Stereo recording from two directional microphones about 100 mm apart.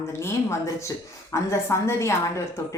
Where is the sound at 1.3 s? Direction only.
30° left (ahead or behind).